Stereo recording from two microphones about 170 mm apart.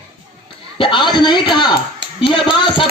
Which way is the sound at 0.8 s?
30° left (ahead or behind).